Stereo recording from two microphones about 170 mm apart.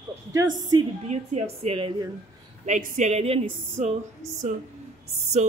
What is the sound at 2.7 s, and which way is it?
A woman's voice, 50° right (ahead or behind).